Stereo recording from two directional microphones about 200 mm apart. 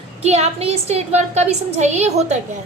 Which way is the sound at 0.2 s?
30° right (ahead or behind).